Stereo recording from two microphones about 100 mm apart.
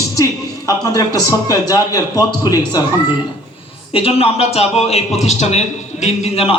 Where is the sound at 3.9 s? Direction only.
80° left.